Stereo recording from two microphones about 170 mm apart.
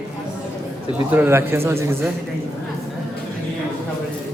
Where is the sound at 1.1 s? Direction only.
10° right (ahead or behind).